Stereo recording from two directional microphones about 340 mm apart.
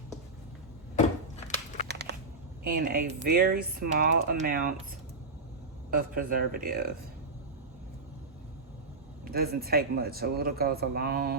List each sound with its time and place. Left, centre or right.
1.5 s biting: left
2.1 s a sound: right
2.6 s speech: right
5.9 s speech: right
9.3 s speech: right